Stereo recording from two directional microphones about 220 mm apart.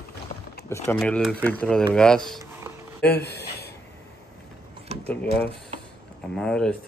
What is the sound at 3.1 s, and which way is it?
Speech, 45° left (ahead or behind).